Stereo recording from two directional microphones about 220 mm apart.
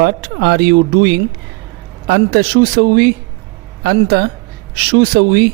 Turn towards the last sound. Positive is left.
turn(degrees=-50)  # may be behind; listen again after turning